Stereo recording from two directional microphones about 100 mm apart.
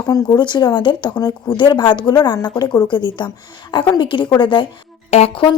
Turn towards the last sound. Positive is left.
turn(degrees=75)  # may be behind; listen again after turning